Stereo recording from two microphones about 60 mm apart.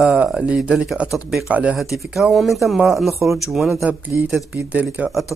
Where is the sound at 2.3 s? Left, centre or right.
Centre.